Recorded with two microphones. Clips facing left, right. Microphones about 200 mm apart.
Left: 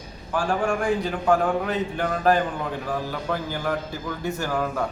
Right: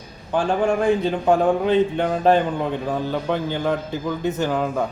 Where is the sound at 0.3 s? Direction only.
20° right (ahead or behind).